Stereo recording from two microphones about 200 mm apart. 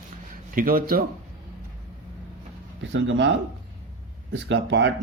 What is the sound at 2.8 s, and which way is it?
Speech, 70° right (ahead or behind).